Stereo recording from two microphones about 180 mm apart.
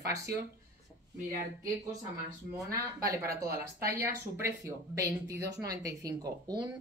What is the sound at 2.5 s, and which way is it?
Speech, 20° right (ahead or behind).